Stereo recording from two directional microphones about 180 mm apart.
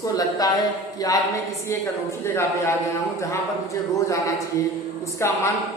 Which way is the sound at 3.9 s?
15° left (ahead or behind).